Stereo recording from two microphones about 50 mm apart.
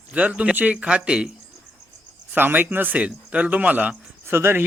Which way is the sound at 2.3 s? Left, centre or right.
Right.